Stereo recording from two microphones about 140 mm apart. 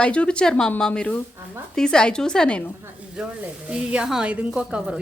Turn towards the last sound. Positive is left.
turn(degrees=-5)  # may be behind; listen again after turning